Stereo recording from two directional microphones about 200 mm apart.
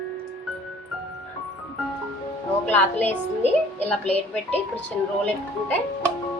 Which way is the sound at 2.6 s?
10° left (ahead or behind).